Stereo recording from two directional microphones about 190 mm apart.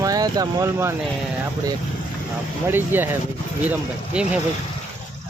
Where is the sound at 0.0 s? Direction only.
20° right (ahead or behind).